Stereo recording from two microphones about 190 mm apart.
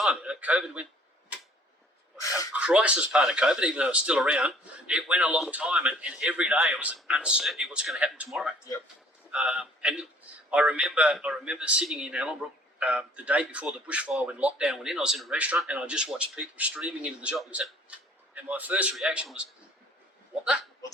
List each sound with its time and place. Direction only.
0.0 s speech: 5° right (ahead or behind)
2.1 s a sound: 15° left (ahead or behind)
2.6 s a man's voice: 5° right (ahead or behind)